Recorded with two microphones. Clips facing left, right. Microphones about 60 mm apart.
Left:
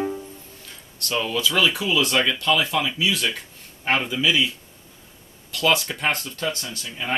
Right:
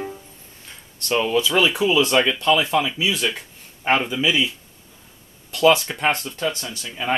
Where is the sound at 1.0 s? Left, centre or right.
Right.